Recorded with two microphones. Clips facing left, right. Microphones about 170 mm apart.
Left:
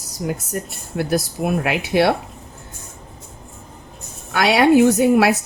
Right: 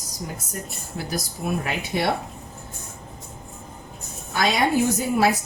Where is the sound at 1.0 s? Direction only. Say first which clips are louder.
Left 9 dB; 65° left (ahead or behind).